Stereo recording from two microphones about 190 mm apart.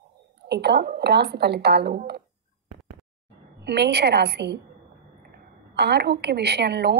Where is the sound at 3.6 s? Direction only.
60° right (ahead or behind).